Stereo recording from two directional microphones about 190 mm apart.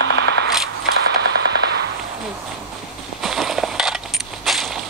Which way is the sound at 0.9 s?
60° right (ahead or behind).